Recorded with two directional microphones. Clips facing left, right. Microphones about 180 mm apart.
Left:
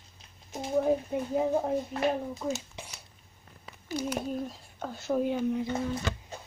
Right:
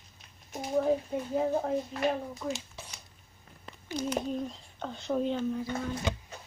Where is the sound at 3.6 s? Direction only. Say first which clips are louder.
Left 1 dB; 10° left (ahead or behind).